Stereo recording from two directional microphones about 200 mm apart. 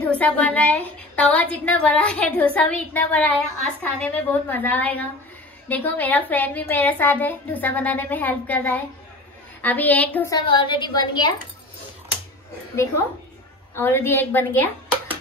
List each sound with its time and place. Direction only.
0.0 s a woman's voice: 5° left (ahead or behind)
13.7 s a woman's voice: 10° left (ahead or behind)